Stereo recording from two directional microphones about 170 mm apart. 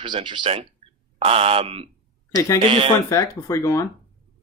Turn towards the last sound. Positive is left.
turn(degrees=15)  # may be behind; listen again after turning